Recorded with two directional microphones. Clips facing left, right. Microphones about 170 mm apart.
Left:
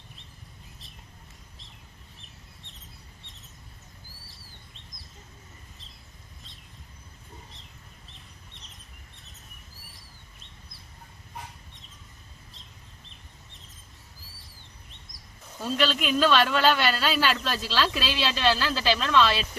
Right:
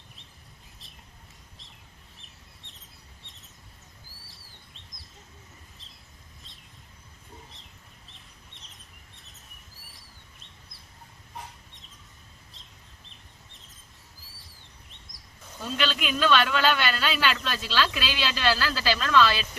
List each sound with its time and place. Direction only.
2.1 s bird: centre (ahead or behind)
4.3 s bird: centre (ahead or behind)
7.5 s bird: centre (ahead or behind)
14.2 s chirp: centre (ahead or behind)
15.6 s speech: 35° left (ahead or behind)